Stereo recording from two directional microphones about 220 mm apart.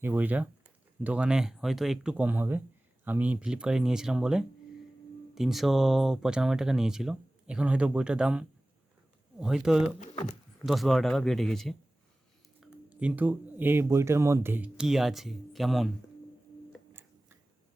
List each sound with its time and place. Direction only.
0.0 s speech: 10° right (ahead or behind)
10.0 s speech: 35° left (ahead or behind)
10.7 s speech: centre (ahead or behind)
16.9 s tick-tock: 10° right (ahead or behind)